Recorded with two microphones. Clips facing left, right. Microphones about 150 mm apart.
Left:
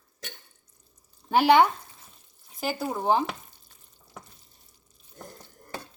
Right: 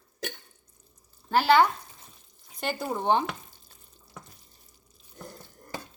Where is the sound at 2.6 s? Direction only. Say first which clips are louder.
Left 1 dB; 5° left (ahead or behind).